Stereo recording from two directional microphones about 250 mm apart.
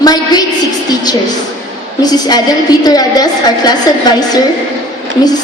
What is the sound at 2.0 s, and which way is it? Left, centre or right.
A woman's voice, centre.